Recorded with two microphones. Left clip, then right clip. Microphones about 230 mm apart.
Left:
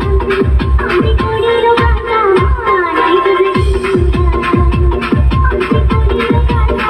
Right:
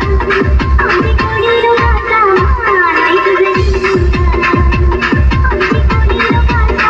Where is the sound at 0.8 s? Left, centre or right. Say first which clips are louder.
Even; left.